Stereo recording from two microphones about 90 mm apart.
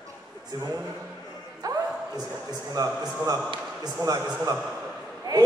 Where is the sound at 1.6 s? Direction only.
45° right (ahead or behind).